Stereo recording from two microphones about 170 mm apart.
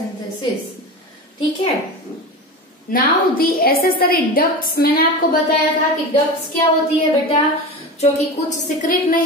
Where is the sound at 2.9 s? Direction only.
60° left (ahead or behind).